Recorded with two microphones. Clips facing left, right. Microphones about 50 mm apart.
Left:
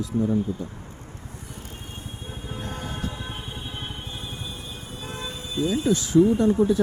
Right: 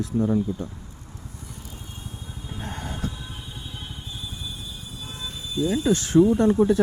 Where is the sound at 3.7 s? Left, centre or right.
Left.